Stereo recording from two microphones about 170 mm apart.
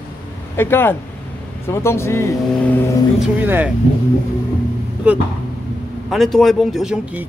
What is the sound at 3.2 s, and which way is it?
Speech, 10° right (ahead or behind).